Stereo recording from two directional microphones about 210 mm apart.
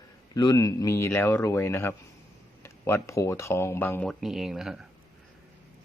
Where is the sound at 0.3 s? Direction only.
20° left (ahead or behind); by 4.9 s centre (ahead or behind).